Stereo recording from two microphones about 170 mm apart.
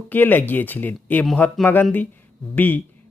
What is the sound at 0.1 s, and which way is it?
Speech, 10° left (ahead or behind).